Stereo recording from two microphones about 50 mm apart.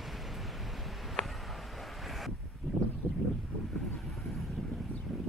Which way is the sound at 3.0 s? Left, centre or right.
Left.